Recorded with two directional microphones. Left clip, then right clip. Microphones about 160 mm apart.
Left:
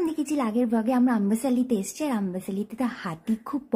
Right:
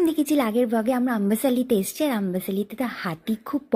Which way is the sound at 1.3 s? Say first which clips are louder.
Right 4 dB; 20° right (ahead or behind).